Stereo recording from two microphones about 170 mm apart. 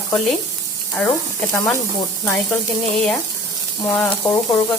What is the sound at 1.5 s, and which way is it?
Sizzle, 10° left (ahead or behind).